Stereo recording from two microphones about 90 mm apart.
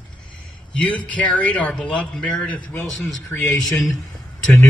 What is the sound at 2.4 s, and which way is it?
Speech, 15° left (ahead or behind).